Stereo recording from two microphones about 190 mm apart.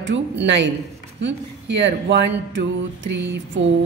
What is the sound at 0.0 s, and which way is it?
A woman's voice, 70° right (ahead or behind).